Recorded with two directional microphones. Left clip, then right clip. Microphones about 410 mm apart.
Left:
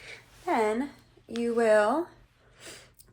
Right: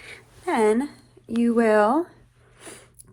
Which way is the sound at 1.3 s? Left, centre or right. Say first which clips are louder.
Right 3 dB; centre.